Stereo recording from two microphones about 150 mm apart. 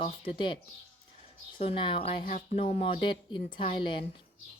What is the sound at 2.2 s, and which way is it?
Speech, 60° left (ahead or behind).